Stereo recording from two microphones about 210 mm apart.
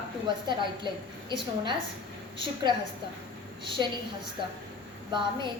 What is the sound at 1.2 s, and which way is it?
A woman's voice, 20° right (ahead or behind).